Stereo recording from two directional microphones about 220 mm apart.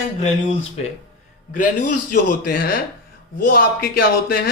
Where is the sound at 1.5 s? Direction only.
35° left (ahead or behind).